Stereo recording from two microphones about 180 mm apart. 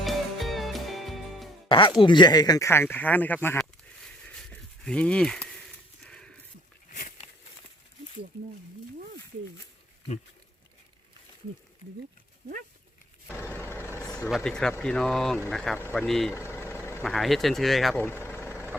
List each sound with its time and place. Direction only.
0.0 s music: centre (ahead or behind)
1.6 s music: 30° left (ahead or behind)
2.0 s speech: 25° left (ahead or behind)
3.6 s a sound: 5° left (ahead or behind)
13.2 s vehicle: 15° left (ahead or behind)
14.3 s speech: centre (ahead or behind)
16.3 s vehicle: 15° left (ahead or behind)
17.0 s speech: centre (ahead or behind)
18.0 s vehicle: 15° left (ahead or behind)
18.5 s vehicle: 10° right (ahead or behind)